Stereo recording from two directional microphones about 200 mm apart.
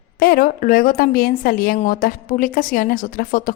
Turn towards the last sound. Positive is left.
turn(degrees=45)  # may be behind; listen again after turning